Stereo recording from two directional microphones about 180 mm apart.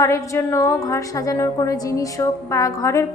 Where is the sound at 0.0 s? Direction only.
15° left (ahead or behind).